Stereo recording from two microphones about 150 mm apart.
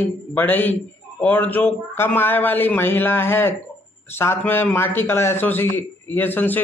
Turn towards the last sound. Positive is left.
turn(degrees=15)  # may be behind; listen again after turning